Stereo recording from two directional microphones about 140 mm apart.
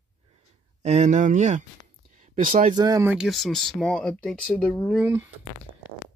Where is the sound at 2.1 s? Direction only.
70° right (ahead or behind).